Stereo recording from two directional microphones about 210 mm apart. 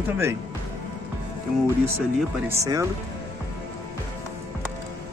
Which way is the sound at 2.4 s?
15° right (ahead or behind).